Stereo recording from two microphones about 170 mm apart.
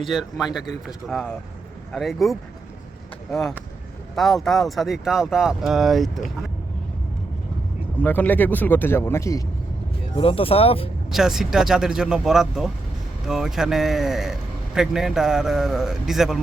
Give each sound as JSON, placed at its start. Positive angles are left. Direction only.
{"t": 0.0, "sound": "speech", "side_deg": 0}
{"t": 4.1, "sound": "speech", "side_deg": 0}
{"t": 7.9, "sound": "speech", "side_deg": 10}
{"t": 10.2, "sound": "speech", "side_deg": 35}
{"t": 11.1, "sound": "speech", "side_deg": 0}